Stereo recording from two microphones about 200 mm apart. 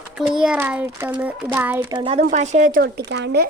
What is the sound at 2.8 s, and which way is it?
Speech, 55° right (ahead or behind).